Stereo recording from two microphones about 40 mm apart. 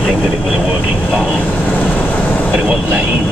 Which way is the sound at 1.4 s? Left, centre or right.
Left.